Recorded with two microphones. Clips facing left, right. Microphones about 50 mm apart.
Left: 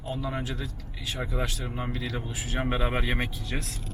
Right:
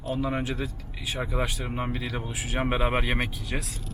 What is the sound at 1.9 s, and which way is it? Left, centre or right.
Speech, centre.